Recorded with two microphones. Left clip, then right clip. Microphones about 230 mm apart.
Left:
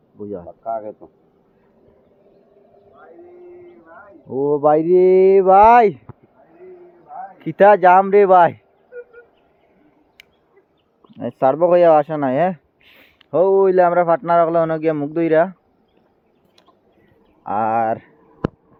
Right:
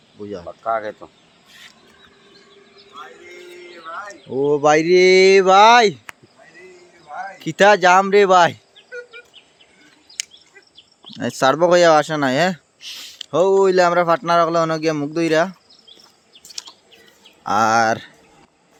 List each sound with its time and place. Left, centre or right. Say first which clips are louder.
0.6 s speech: right 4 dB; right
4.3 s speech: even; centre
4.8 s speech: right 1 dB; centre
7.3 s speech: left 2 dB; centre
11.0 s speech: even; right
17.4 s speech: right 3 dB; right